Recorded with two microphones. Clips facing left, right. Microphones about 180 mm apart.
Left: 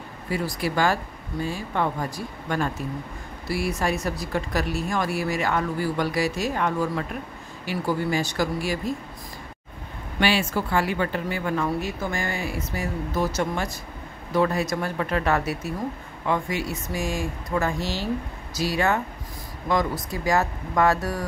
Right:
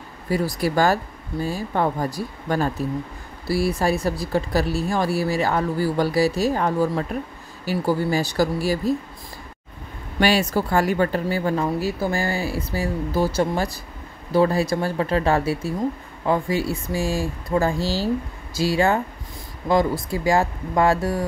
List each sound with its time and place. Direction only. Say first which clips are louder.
0.3 s speech: right 5 dB; 40° right (ahead or behind)
10.2 s speech: right 4 dB; 40° right (ahead or behind)